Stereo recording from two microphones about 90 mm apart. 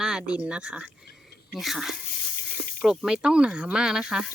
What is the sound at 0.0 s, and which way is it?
Speech, 10° right (ahead or behind).